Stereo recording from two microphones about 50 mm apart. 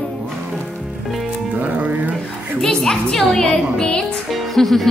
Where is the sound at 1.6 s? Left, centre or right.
Right.